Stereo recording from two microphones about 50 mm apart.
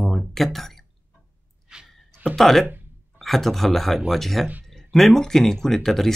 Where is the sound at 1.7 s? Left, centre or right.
Centre.